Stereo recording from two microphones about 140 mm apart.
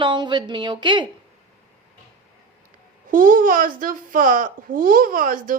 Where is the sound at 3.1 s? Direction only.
80° right.